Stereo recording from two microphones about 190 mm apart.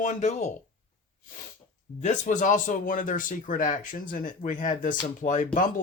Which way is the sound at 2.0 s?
40° left (ahead or behind).